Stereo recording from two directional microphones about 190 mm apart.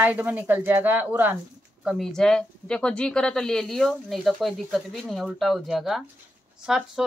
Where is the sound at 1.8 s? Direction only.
Centre (ahead or behind).